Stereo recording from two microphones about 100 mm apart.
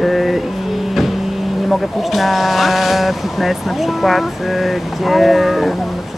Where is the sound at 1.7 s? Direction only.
Centre (ahead or behind).